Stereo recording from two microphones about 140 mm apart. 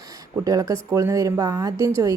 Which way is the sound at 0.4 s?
25° right (ahead or behind).